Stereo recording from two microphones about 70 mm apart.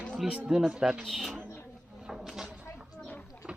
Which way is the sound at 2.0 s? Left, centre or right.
Centre.